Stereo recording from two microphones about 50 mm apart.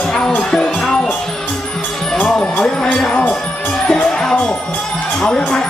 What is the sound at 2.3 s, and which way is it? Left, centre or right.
Speech, centre.